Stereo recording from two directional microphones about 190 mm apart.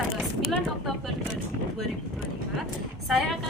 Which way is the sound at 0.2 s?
Centre (ahead or behind).